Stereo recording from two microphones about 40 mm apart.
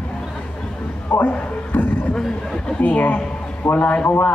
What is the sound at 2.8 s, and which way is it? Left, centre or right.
A man's voice, left.